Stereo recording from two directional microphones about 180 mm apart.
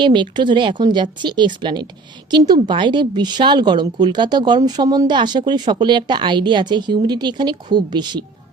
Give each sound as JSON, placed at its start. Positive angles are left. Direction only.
{"t": 0.0, "sound": "a woman's voice", "side_deg": -25}